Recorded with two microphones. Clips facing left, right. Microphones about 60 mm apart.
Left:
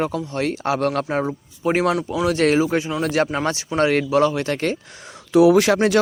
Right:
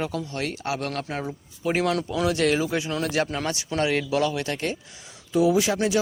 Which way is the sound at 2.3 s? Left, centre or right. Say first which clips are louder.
Left 6 dB; left.